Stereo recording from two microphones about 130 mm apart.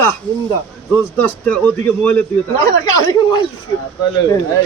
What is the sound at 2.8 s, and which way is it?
Speech, 30° left (ahead or behind).